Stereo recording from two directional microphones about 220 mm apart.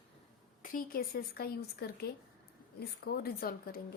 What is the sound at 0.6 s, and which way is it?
A woman's voice, 40° left (ahead or behind).